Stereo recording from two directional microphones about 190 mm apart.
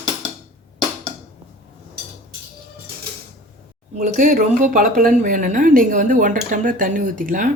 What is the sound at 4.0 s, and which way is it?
Speech, 45° right (ahead or behind).